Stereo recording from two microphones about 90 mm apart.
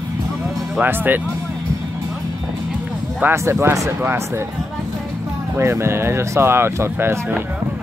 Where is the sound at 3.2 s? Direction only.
25° right (ahead or behind).